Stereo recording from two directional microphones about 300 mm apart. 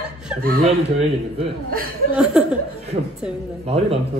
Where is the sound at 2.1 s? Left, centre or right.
Centre.